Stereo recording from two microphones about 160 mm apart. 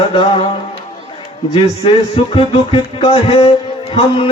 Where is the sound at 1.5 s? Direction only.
35° left (ahead or behind).